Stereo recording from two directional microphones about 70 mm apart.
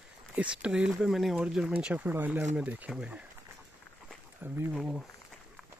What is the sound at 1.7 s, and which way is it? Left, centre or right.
Speech, right.